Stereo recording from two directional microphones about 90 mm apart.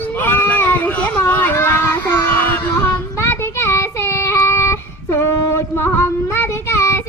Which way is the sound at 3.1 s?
30° left (ahead or behind).